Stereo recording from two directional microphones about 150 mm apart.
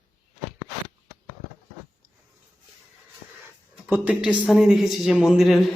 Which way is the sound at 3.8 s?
10° right (ahead or behind).